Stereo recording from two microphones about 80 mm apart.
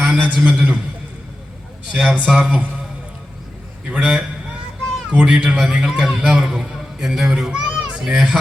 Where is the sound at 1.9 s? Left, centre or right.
Centre.